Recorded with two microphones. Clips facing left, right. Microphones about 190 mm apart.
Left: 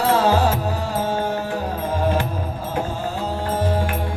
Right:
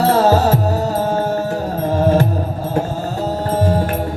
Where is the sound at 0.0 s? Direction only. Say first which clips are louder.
Right 4 dB; 40° right (ahead or behind).